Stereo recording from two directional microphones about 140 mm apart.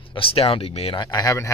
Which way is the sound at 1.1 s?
20° left (ahead or behind).